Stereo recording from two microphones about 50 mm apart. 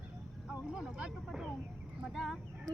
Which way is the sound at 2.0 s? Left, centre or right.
Centre.